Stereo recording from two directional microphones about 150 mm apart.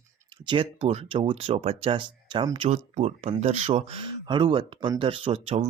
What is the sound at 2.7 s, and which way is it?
Speech, 45° right (ahead or behind).